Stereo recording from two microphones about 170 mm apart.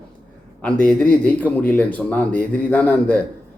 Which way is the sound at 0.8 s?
5° left (ahead or behind).